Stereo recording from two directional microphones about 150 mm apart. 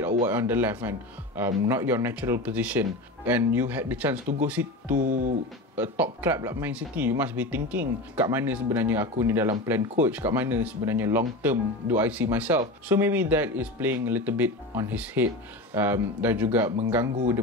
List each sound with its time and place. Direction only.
0.3 s speech: 15° right (ahead or behind)
5.0 s speech: 60° right (ahead or behind)
5.8 s speech: 10° right (ahead or behind)